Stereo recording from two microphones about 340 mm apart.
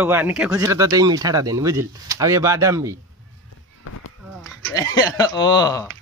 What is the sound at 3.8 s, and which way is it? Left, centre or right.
Run, left.